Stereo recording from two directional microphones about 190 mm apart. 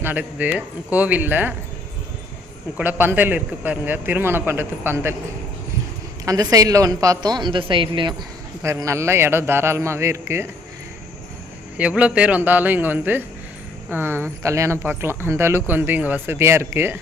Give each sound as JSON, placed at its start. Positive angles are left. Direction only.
{"t": 0.0, "sound": "speech", "side_deg": -10}
{"t": 2.7, "sound": "speech", "side_deg": -10}
{"t": 6.2, "sound": "a woman's voice", "side_deg": -20}
{"t": 8.6, "sound": "speech", "side_deg": -15}
{"t": 11.8, "sound": "speech", "side_deg": -5}